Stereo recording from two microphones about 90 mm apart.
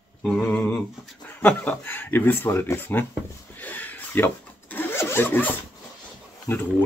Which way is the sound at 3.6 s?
20° left (ahead or behind).